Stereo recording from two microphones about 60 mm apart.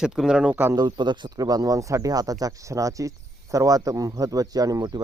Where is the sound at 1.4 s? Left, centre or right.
Right.